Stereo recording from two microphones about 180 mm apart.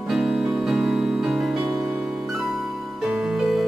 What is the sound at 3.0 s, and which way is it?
Music, centre (ahead or behind).